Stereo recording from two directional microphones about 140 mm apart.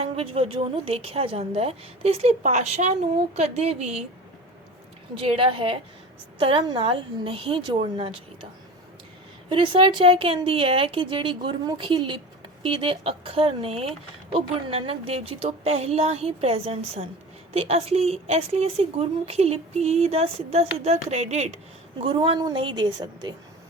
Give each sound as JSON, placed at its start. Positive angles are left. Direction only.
{"t": 0.0, "sound": "a woman's voice", "side_deg": -45}
{"t": 5.1, "sound": "a woman's voice", "side_deg": -40}
{"t": 9.5, "sound": "a woman's voice", "side_deg": -35}
{"t": 22.0, "sound": "a woman's voice", "side_deg": -40}